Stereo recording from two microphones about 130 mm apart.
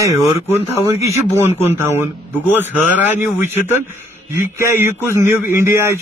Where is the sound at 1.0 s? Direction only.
20° right (ahead or behind).